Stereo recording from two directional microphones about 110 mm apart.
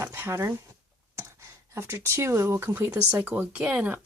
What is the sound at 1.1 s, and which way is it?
Speech, 25° right (ahead or behind).